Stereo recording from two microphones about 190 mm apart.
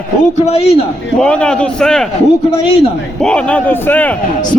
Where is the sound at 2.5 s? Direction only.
30° left (ahead or behind).